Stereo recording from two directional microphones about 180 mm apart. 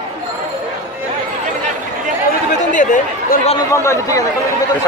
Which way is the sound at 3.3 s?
55° left (ahead or behind).